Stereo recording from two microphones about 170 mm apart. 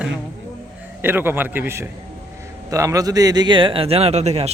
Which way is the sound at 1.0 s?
10° right (ahead or behind).